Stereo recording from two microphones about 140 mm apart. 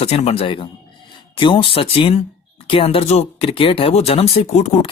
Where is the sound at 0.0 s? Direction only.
50° left (ahead or behind).